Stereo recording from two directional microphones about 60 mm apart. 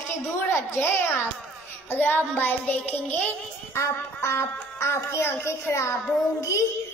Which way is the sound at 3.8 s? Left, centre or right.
Left.